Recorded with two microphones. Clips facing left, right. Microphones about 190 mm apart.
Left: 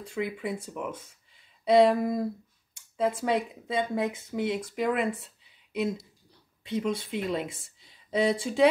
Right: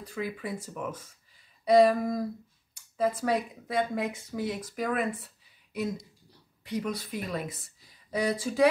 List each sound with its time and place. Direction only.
0.0 s speech: 20° left (ahead or behind)
1.6 s a sound: 25° left (ahead or behind)
3.0 s speech: 25° left (ahead or behind)
6.6 s speech: 25° left (ahead or behind)